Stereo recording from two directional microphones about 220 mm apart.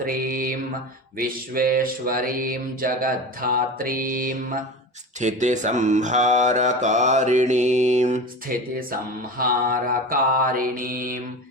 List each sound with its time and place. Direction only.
0.0 s mantra: 40° right (ahead or behind)
1.5 s mantra: 40° right (ahead or behind)